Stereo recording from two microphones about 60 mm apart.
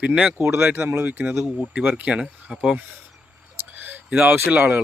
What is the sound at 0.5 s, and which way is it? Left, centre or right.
Speech, right.